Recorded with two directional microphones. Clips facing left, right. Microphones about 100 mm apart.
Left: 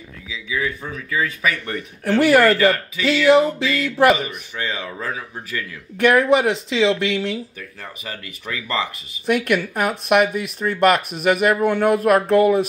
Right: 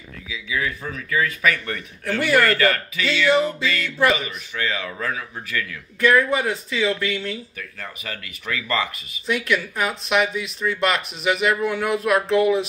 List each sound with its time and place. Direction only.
0.3 s speech: 20° left (ahead or behind)
2.5 s speech: 5° left (ahead or behind)
4.6 s speech: 25° left (ahead or behind)
5.9 s speech: 70° left (ahead or behind)
7.8 s speech: 25° left (ahead or behind)
9.2 s speech: 55° left (ahead or behind)